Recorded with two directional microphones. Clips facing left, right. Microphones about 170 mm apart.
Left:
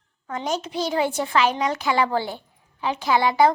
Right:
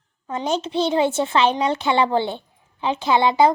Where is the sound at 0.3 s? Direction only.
25° right (ahead or behind).